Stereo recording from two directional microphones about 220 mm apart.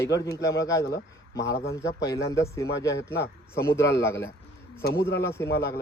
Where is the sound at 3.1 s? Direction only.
50° left (ahead or behind).